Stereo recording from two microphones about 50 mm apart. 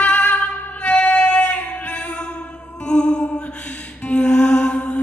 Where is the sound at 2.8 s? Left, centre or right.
Centre.